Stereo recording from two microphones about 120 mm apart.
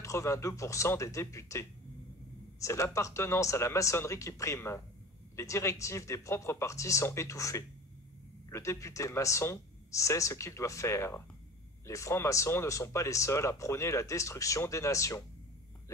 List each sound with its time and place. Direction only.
0.0 s speech: 25° left (ahead or behind)